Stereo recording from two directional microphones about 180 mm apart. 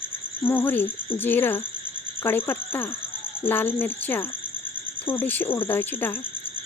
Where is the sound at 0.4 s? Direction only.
10° left (ahead or behind).